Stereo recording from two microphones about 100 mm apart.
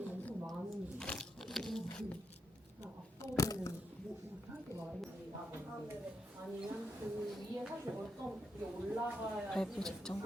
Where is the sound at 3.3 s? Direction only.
30° left (ahead or behind).